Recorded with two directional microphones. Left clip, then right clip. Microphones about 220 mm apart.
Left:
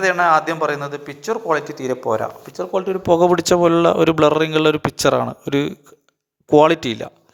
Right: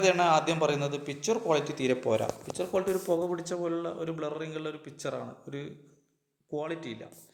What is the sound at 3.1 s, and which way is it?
Speech, 45° left (ahead or behind).